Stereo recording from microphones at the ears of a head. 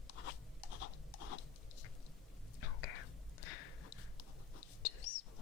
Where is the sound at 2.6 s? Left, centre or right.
Left.